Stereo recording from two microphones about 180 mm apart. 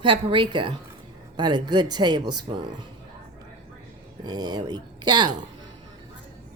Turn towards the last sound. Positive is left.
turn(degrees=-25)  # may be behind; listen again after turning